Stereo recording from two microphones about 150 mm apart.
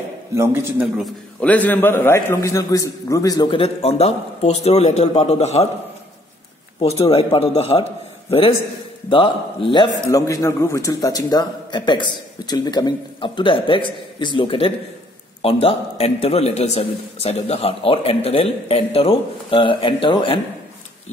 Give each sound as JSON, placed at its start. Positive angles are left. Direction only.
{"t": 0.4, "sound": "speech", "side_deg": -15}
{"t": 1.4, "sound": "a man's voice", "side_deg": 10}
{"t": 3.5, "sound": "a man's voice", "side_deg": 40}
{"t": 6.8, "sound": "a man's voice", "side_deg": 40}